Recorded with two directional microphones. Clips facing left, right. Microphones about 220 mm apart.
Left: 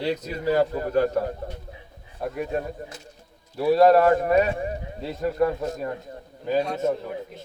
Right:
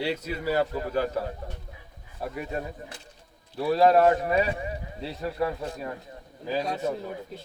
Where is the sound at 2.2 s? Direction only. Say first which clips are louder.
Left 5 dB; centre (ahead or behind).